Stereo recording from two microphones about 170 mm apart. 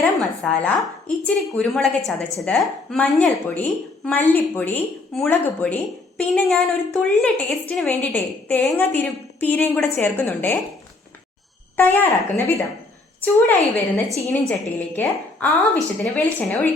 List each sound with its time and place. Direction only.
0.0 s a woman's voice: 10° left (ahead or behind)
11.8 s a woman's voice: 10° left (ahead or behind)
14.2 s a woman's voice: 15° left (ahead or behind)